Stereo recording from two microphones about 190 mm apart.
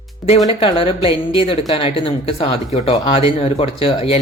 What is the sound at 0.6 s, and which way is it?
Speech, 30° left (ahead or behind).